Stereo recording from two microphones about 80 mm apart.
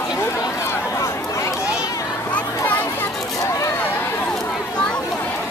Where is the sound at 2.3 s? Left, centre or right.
Left.